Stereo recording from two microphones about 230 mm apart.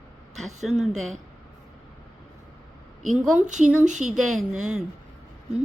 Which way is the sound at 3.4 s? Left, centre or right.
Right.